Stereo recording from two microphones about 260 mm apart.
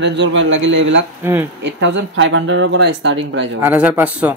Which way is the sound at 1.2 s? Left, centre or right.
Centre.